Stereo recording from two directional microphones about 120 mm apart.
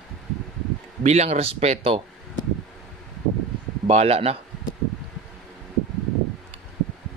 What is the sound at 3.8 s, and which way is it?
Speech, 60° right (ahead or behind).